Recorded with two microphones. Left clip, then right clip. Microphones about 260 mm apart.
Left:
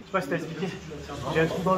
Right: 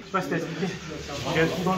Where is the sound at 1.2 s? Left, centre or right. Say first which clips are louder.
Right 1 dB; left.